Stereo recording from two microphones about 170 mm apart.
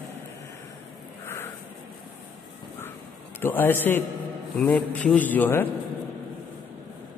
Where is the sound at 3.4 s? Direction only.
10° left (ahead or behind).